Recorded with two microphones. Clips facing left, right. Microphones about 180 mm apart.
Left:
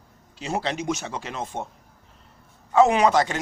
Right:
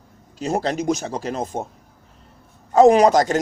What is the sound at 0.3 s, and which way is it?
Speech, 40° right (ahead or behind).